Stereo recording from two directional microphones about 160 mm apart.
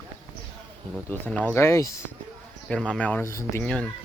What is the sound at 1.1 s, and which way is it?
Speech, 10° left (ahead or behind).